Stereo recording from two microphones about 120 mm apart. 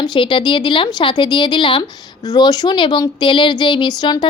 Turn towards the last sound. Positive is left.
turn(degrees=35)  # may be behind; listen again after turning